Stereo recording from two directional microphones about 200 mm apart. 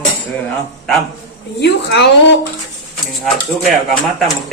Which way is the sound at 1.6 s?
55° left (ahead or behind).